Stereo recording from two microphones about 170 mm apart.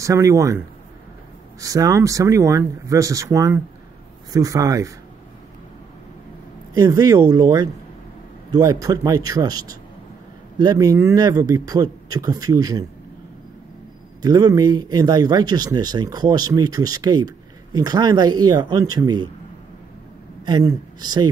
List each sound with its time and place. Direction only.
0.0 s a man's voice: 20° right (ahead or behind)
1.6 s speech: 20° right (ahead or behind)
6.7 s a man's voice: 20° right (ahead or behind)
14.2 s speech: 25° right (ahead or behind)
20.4 s speech: 25° right (ahead or behind)